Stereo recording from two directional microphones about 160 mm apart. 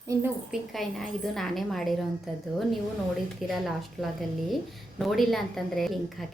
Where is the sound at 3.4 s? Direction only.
Centre (ahead or behind).